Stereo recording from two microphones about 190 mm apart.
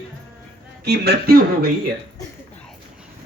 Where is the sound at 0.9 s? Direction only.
60° right (ahead or behind).